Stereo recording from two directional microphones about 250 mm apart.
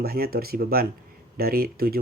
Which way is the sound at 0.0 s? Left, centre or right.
Right.